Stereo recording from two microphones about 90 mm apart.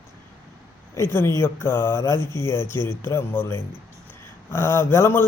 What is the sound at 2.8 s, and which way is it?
Speech, 55° right (ahead or behind).